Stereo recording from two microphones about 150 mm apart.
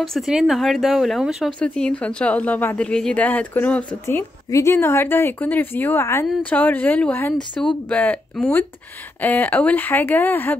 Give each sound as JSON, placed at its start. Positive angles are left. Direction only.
{"t": 0.0, "sound": "speech", "side_deg": 0}